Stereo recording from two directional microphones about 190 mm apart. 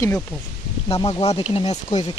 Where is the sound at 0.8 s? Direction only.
30° left (ahead or behind).